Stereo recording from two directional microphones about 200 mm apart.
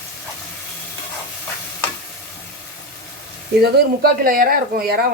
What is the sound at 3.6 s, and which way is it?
Speech, 50° right (ahead or behind).